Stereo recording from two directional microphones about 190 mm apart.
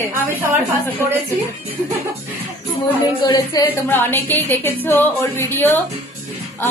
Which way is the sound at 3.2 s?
20° left (ahead or behind).